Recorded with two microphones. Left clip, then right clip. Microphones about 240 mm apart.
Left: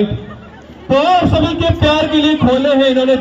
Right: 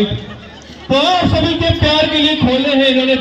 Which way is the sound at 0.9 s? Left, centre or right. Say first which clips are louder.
Left 2 dB; left.